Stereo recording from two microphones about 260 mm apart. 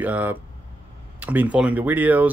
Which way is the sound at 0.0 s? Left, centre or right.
Centre.